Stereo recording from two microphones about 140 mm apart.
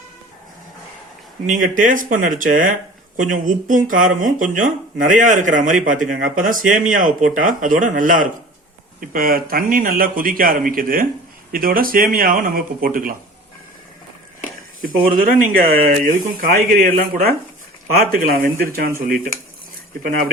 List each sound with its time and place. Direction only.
1.5 s speech: 70° right (ahead or behind)
9.0 s speech: 90° right
14.8 s speech: 85° right
19.0 s speech: 80° right